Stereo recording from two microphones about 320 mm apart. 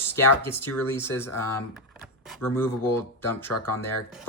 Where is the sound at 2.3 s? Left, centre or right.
Centre.